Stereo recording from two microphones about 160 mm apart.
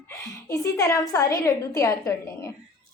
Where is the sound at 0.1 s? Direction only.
20° left (ahead or behind).